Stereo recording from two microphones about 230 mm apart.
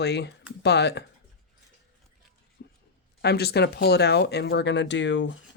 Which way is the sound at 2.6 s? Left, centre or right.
Left.